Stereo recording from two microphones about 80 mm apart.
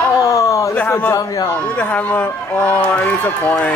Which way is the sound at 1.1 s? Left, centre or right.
Left.